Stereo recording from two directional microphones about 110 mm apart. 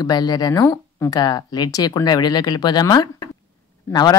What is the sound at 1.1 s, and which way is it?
Speech, 40° left (ahead or behind).